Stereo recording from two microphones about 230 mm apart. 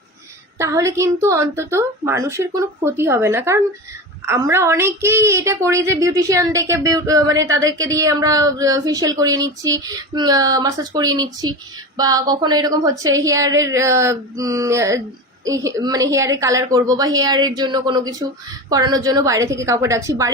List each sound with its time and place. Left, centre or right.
0.6 s a woman's voice: centre